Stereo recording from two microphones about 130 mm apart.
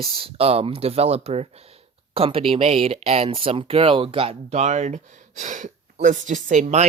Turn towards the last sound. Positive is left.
turn(degrees=-65)  # may be behind; listen again after turning